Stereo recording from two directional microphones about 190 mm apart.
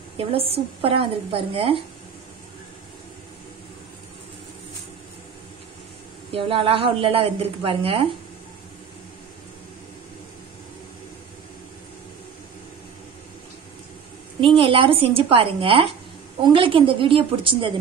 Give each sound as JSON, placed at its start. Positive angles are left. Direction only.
{"t": 0.2, "sound": "a woman's voice", "side_deg": -30}
{"t": 6.3, "sound": "a woman's voice", "side_deg": -30}
{"t": 14.4, "sound": "a woman's voice", "side_deg": -25}